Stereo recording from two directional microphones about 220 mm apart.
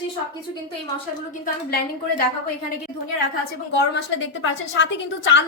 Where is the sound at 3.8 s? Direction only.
55° left (ahead or behind).